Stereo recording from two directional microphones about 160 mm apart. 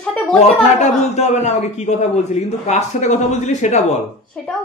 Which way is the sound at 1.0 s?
45° left (ahead or behind).